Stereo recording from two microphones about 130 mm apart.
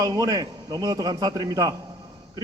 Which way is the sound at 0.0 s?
30° right (ahead or behind).